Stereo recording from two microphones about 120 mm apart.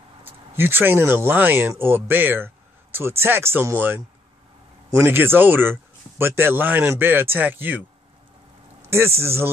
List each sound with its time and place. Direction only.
0.2 s speech: 20° right (ahead or behind)
8.9 s speech: 20° right (ahead or behind)